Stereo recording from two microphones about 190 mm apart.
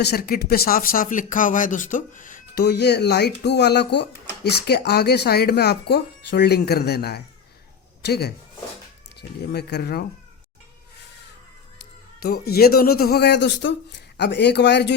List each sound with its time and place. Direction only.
0.0 s speech: 55° left (ahead or behind)
12.2 s speech: 55° left (ahead or behind)